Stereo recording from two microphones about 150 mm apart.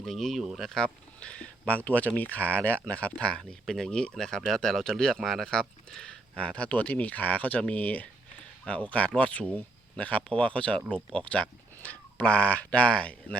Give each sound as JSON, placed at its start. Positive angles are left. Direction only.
{"t": 0.0, "sound": "speech", "side_deg": 0}